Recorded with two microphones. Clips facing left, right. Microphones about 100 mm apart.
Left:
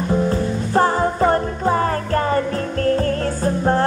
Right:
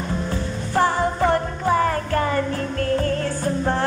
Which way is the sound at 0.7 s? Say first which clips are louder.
Left 2 dB; 35° left (ahead or behind).